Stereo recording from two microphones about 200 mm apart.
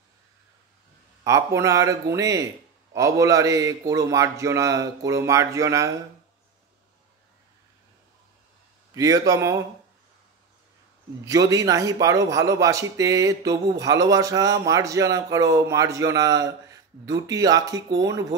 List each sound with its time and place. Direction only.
1.2 s a man's voice: 15° right (ahead or behind)
8.9 s a man's voice: 15° right (ahead or behind)
11.2 s a man's voice: 15° right (ahead or behind)